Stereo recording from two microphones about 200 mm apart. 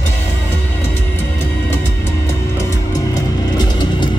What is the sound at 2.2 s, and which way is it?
Music, 15° left (ahead or behind).